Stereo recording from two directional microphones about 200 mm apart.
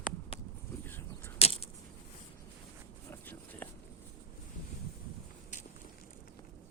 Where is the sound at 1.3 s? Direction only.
30° left (ahead or behind).